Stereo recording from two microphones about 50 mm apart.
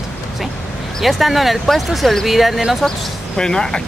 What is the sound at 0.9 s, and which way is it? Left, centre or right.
Speech, centre.